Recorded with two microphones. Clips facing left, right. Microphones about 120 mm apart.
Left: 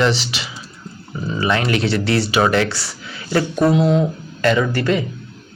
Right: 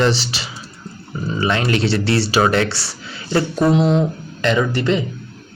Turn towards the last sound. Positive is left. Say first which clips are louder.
# even
turn(degrees=-20)  # may be behind; listen again after turning